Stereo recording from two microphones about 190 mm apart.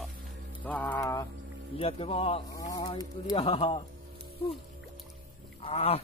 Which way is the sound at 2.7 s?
20° left (ahead or behind).